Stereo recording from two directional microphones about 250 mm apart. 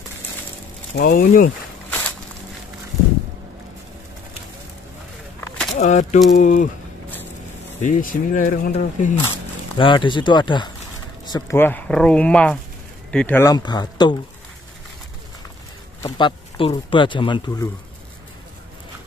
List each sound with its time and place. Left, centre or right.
0.9 s speech: left
1.9 s walk: centre
5.8 s speech: left
7.8 s speech: left
9.8 s speech: centre
16.0 s speech: centre